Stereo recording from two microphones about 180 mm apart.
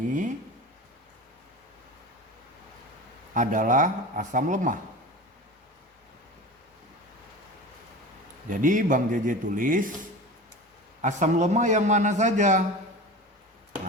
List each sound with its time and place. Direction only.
3.3 s speech: 45° right (ahead or behind)
8.4 s speech: 45° right (ahead or behind)
11.0 s a man's voice: 40° right (ahead or behind)